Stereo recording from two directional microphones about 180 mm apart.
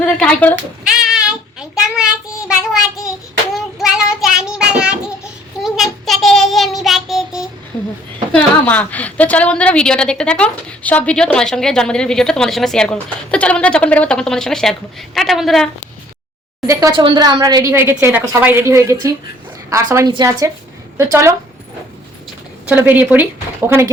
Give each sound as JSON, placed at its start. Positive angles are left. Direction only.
{"t": 0.2, "sound": "speech", "side_deg": 5}
{"t": 0.9, "sound": "child singing", "side_deg": -5}
{"t": 3.5, "sound": "child singing", "side_deg": 0}
{"t": 8.3, "sound": "a woman's voice", "side_deg": 10}
{"t": 16.6, "sound": "a woman's voice", "side_deg": -25}
{"t": 22.7, "sound": "speech", "side_deg": -10}